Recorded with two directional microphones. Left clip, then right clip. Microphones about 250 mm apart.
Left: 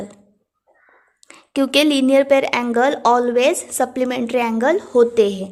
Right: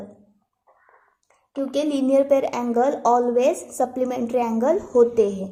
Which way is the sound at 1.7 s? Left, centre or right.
Left.